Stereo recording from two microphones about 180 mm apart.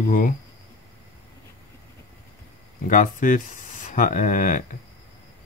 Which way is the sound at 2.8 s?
50° left (ahead or behind).